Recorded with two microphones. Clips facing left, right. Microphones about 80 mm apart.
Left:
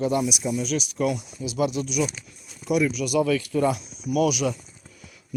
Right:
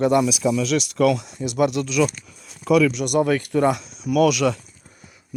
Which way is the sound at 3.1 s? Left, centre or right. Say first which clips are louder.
Right 2 dB; right.